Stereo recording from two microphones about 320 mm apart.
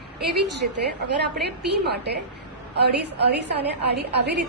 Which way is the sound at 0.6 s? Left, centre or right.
Right.